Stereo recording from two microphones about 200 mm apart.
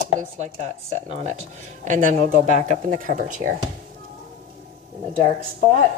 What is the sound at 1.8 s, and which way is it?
Speech, 40° right (ahead or behind).